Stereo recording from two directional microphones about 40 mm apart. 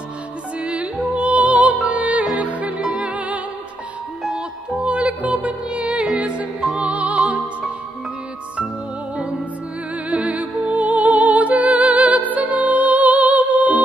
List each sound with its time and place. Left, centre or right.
0.6 s music: right
4.8 s music: right
10.0 s music: right